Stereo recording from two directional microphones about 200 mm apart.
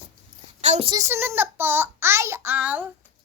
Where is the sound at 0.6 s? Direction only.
35° right (ahead or behind).